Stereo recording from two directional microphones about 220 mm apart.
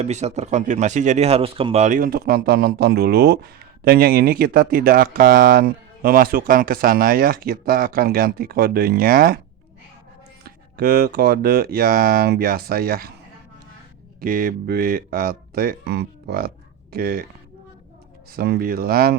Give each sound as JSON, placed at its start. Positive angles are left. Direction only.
{"t": 0.0, "sound": "speech", "side_deg": -30}
{"t": 10.4, "sound": "speech", "side_deg": -40}
{"t": 14.2, "sound": "speech", "side_deg": -40}
{"t": 18.3, "sound": "speech", "side_deg": -45}